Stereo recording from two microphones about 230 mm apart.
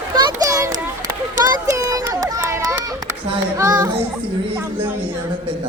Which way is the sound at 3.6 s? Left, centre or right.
Centre.